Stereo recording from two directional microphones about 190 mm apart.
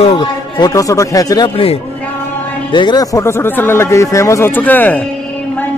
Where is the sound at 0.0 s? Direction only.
30° left (ahead or behind); by 5.0 s 10° left (ahead or behind).